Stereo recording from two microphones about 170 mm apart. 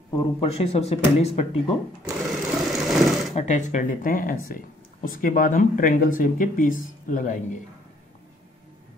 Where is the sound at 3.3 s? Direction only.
40° left (ahead or behind).